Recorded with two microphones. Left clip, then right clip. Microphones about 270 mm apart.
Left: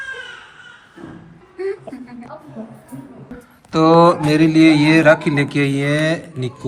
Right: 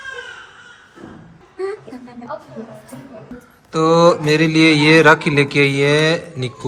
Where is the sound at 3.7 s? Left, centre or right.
Centre.